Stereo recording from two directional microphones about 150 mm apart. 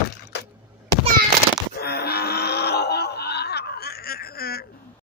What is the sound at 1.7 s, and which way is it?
Groan, 90° left.